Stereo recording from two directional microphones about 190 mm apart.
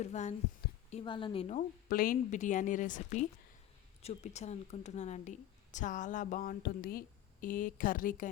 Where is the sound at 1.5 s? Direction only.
50° left (ahead or behind).